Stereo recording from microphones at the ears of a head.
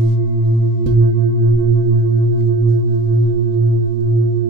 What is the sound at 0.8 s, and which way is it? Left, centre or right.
Singing bowl, right.